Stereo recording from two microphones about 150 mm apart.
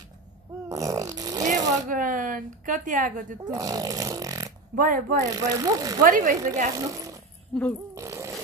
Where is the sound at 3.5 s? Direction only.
25° right (ahead or behind).